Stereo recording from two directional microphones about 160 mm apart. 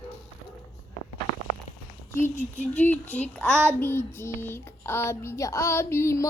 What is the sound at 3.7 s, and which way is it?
Child singing, 15° left (ahead or behind).